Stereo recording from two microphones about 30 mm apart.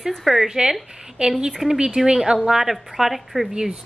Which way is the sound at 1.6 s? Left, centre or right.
Centre.